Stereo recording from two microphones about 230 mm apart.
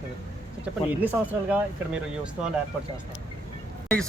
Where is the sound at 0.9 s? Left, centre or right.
Centre.